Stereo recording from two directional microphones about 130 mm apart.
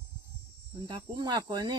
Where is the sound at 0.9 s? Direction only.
35° right (ahead or behind).